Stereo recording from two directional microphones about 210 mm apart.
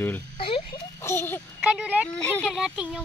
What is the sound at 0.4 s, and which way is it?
Oink, 25° left (ahead or behind).